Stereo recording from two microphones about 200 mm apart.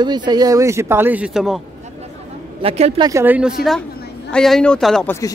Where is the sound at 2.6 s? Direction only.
30° right (ahead or behind).